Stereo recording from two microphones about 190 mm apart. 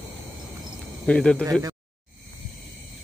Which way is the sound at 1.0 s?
5° left (ahead or behind).